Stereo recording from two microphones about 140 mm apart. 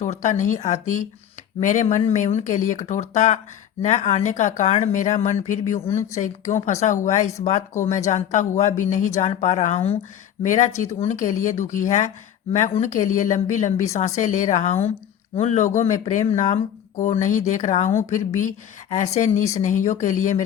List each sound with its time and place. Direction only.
0.0 s speech: 60° left (ahead or behind)
5.9 s speech: 20° left (ahead or behind)
6.1 s speech: 60° left (ahead or behind)
10.4 s speech: 60° left (ahead or behind)